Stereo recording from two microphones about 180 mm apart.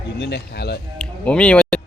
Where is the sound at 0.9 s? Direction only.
5° left (ahead or behind).